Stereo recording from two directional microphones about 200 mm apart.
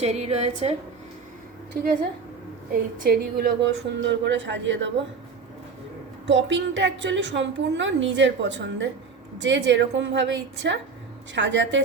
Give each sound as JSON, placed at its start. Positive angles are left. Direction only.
{"t": 0.0, "sound": "a woman's voice", "side_deg": -30}
{"t": 1.7, "sound": "a woman's voice", "side_deg": -50}
{"t": 3.0, "sound": "a woman's voice", "side_deg": -50}
{"t": 6.2, "sound": "a woman's voice", "side_deg": -65}